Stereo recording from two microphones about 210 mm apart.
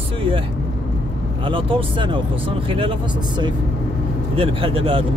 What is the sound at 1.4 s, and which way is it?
Speech, 25° right (ahead or behind).